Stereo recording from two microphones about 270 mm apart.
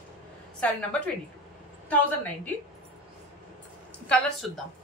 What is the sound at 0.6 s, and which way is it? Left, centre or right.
Speech, centre.